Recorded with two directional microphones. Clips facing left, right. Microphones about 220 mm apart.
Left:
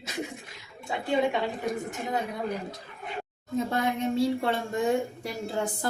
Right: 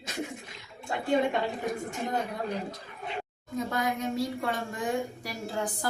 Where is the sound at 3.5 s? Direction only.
25° left (ahead or behind).